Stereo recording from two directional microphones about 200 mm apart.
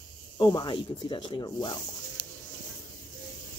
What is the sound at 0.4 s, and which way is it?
Speech, 20° left (ahead or behind).